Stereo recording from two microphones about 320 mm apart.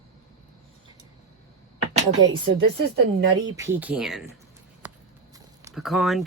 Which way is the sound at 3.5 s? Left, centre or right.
Centre.